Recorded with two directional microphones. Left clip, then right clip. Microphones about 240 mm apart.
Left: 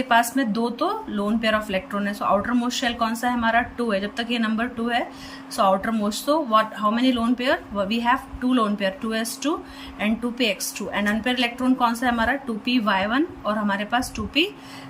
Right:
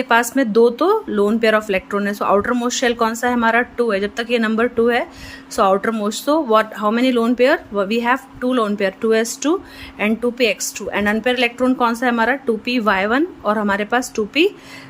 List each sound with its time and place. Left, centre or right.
0.0 s speech: centre